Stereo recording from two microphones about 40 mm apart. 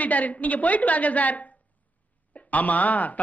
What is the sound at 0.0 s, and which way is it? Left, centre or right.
A man's voice, left.